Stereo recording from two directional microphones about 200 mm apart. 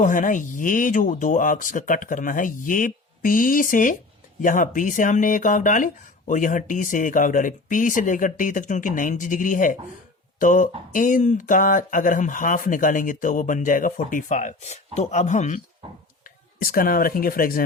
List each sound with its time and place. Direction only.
0.0 s speech: 40° left (ahead or behind)